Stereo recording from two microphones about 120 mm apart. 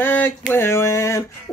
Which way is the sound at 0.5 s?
20° left (ahead or behind).